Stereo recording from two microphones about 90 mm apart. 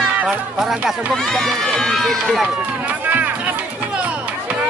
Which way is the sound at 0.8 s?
5° left (ahead or behind).